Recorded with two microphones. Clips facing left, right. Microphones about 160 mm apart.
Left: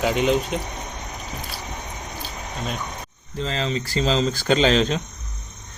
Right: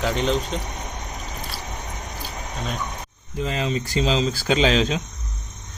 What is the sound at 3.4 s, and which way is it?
Speech, 10° right (ahead or behind).